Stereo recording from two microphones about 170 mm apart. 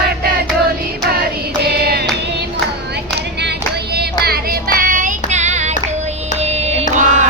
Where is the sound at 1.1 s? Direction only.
65° right (ahead or behind).